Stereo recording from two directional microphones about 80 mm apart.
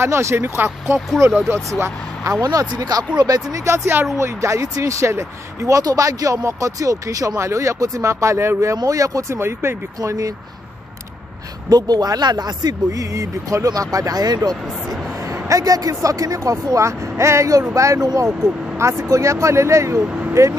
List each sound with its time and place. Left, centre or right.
0.0 s speech: right
2.4 s speech: right
3.5 s speech: right
9.4 s speech: right
9.9 s speech: right
11.7 s speech: right
14.6 s a sound: centre
15.3 s speech: right
18.8 s speech: right
20.0 s speech: centre